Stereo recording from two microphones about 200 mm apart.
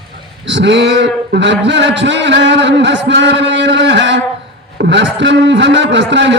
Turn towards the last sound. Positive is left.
turn(degrees=-65)  # may be behind; listen again after turning